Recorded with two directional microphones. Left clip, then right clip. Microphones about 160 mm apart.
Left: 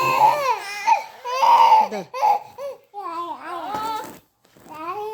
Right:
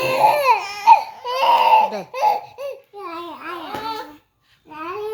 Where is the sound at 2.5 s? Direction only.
15° left (ahead or behind).